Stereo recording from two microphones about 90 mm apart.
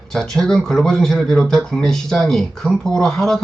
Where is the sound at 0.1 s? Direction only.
5° left (ahead or behind).